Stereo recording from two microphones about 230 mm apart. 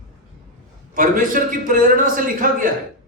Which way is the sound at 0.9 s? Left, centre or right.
Right.